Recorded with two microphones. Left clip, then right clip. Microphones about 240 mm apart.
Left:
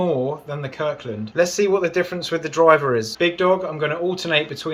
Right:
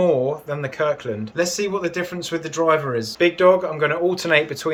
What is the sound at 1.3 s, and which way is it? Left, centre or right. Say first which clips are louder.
Speech: left 5 dB; centre.